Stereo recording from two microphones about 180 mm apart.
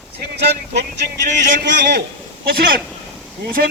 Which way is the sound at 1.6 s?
75° right (ahead or behind).